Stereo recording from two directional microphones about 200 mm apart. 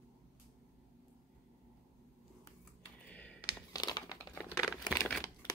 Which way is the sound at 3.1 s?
5° left (ahead or behind).